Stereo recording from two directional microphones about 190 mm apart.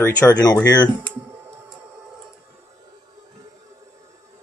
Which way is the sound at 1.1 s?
15° right (ahead or behind).